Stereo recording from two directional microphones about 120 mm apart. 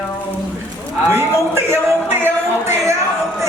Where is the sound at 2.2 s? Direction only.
20° right (ahead or behind).